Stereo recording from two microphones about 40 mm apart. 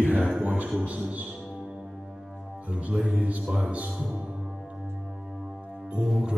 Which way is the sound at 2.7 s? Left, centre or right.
Right.